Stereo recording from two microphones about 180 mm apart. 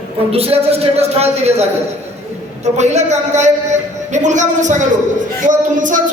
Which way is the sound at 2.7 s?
40° right (ahead or behind).